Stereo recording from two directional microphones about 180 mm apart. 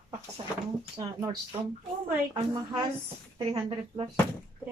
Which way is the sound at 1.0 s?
20° right (ahead or behind).